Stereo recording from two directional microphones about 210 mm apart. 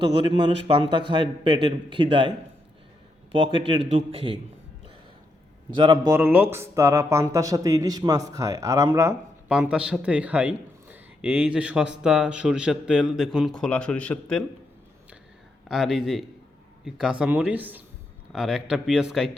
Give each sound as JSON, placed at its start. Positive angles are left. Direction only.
{"t": 0.0, "sound": "a man's voice", "side_deg": -25}
{"t": 3.3, "sound": "a man's voice", "side_deg": -25}
{"t": 5.7, "sound": "a man's voice", "side_deg": -20}
{"t": 6.1, "sound": "a man's voice", "side_deg": -10}
{"t": 15.7, "sound": "a man's voice", "side_deg": 0}